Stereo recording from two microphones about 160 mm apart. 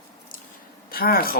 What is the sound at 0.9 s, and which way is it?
Speech, 70° left (ahead or behind).